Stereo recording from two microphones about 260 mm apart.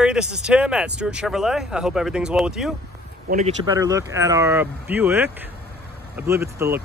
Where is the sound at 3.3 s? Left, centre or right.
Right.